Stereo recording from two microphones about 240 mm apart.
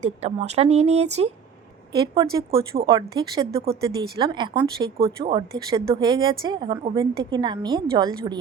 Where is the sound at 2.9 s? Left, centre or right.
Centre.